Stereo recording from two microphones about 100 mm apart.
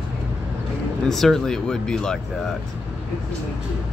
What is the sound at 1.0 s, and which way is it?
Speech, 5° left (ahead or behind).